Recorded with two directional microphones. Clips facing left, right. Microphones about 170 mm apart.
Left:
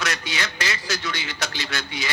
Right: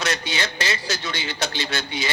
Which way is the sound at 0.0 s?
25° right (ahead or behind).